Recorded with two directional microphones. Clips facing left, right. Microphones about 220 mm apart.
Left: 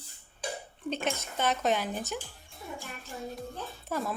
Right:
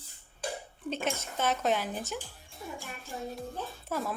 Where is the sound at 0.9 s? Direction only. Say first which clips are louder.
Left 1 dB; 5° right (ahead or behind).